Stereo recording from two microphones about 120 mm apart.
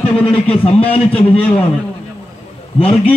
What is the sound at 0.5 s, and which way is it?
Speech, 55° left (ahead or behind).